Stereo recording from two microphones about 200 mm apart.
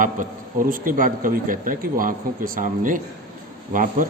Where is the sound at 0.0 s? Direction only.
40° right (ahead or behind).